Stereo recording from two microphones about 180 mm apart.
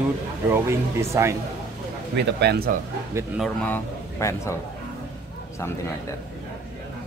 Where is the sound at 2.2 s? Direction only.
70° right (ahead or behind).